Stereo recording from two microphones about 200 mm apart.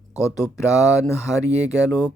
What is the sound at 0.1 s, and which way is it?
Speech, 15° left (ahead or behind).